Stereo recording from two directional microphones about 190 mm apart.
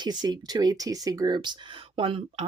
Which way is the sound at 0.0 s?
20° right (ahead or behind).